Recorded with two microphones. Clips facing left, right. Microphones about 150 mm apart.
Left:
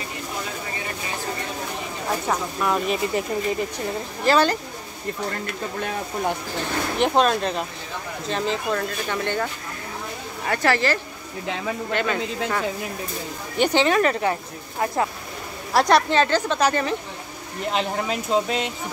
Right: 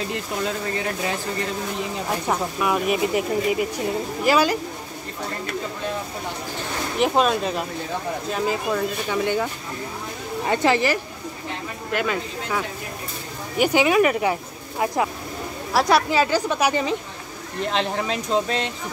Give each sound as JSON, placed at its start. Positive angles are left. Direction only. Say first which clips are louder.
{"t": 2.2, "sound": "speech", "louder": "right 1 dB", "side_deg": -5}
{"t": 7.0, "sound": "speech", "louder": "even", "side_deg": -5}
{"t": 11.9, "sound": "speech", "louder": "right 2 dB", "side_deg": -5}
{"t": 17.6, "sound": "speech", "louder": "even", "side_deg": 5}